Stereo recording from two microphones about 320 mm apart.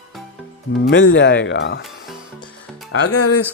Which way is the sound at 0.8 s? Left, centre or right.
Left.